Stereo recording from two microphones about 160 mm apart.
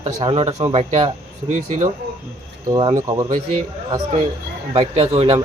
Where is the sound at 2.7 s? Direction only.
30° right (ahead or behind).